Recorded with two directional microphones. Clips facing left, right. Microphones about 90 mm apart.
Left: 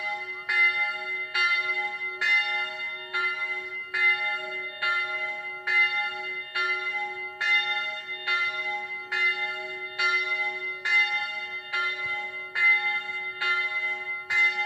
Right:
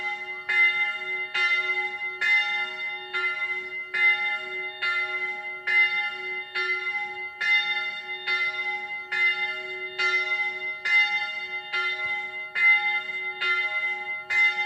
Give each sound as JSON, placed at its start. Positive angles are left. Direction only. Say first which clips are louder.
{"t": 0.0, "sound": "church bell", "louder": "even", "side_deg": 15}
{"t": 3.9, "sound": "church bell", "louder": "right 1 dB", "side_deg": 20}
{"t": 5.7, "sound": "church bell", "louder": "right 1 dB", "side_deg": 20}